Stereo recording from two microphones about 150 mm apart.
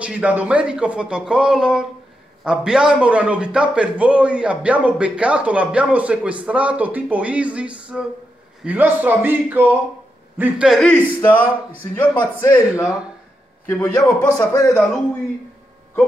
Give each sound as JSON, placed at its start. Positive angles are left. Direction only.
{"t": 0.0, "sound": "a man's voice", "side_deg": -10}
{"t": 10.7, "sound": "a man's voice", "side_deg": 5}